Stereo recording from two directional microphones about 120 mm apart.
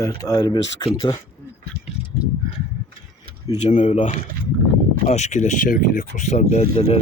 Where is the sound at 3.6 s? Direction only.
80° left.